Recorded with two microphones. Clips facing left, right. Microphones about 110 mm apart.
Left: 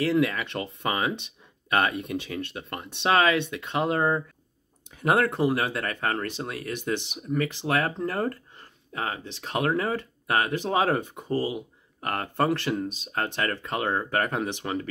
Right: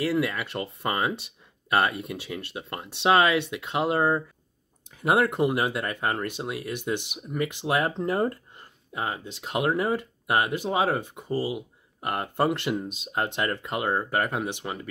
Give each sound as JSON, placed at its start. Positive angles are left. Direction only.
{"t": 0.0, "sound": "speech", "side_deg": -5}